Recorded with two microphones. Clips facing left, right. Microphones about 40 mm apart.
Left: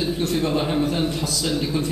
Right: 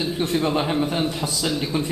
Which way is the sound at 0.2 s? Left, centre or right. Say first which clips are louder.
Right 3 dB; centre.